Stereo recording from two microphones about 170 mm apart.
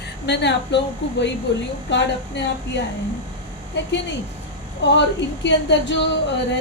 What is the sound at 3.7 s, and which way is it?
Speech, 90° left.